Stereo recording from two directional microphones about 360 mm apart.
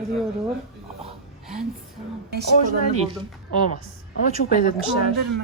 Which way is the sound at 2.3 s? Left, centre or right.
Centre.